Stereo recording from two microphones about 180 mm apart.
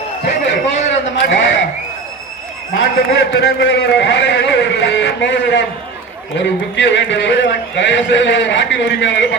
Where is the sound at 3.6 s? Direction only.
75° left (ahead or behind).